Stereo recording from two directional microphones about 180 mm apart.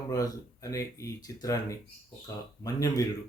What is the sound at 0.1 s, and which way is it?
Speech, 20° left (ahead or behind).